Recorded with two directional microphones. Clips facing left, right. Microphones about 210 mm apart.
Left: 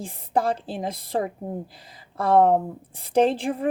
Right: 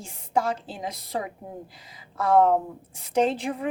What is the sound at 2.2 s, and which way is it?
Speech, 30° left (ahead or behind).